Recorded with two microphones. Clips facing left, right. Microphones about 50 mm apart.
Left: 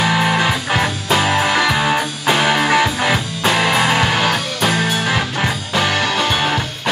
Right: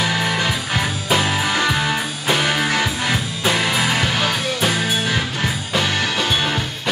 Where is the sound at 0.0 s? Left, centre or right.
Left.